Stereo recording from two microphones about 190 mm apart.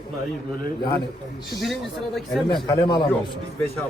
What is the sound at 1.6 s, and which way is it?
Speech, centre (ahead or behind).